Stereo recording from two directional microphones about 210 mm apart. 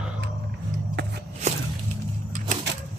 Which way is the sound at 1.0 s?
55° right (ahead or behind).